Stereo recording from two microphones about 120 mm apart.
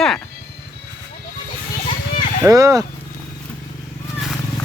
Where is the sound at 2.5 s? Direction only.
30° right (ahead or behind).